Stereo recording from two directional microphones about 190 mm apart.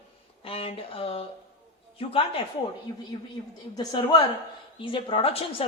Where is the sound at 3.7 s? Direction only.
20° left (ahead or behind).